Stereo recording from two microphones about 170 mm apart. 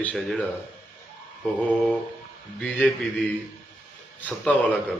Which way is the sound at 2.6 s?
10° left (ahead or behind).